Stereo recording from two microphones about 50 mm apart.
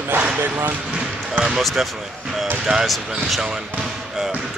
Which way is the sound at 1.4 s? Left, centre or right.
Centre.